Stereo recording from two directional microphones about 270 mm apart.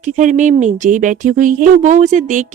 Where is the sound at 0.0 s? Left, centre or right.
Right.